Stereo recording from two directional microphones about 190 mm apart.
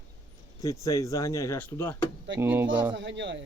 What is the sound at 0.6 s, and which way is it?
Speech, 20° left (ahead or behind).